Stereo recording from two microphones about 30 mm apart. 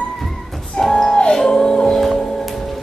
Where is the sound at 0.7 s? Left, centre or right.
Centre.